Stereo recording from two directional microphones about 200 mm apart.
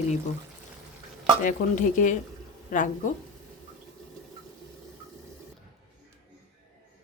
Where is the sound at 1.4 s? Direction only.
40° left (ahead or behind).